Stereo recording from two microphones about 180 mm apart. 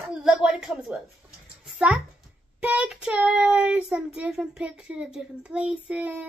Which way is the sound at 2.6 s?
5° right (ahead or behind).